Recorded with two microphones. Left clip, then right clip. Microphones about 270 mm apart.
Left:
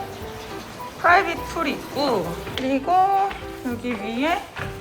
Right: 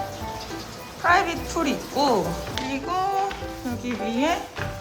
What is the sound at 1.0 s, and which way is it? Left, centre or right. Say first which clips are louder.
A woman's voice: left 3 dB; centre.